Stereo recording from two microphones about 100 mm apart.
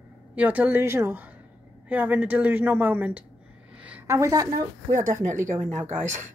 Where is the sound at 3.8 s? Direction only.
15° right (ahead or behind).